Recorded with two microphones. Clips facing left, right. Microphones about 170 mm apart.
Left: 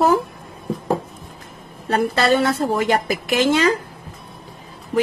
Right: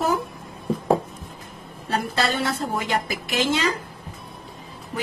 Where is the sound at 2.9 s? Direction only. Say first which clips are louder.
Left 6 dB; 55° left (ahead or behind).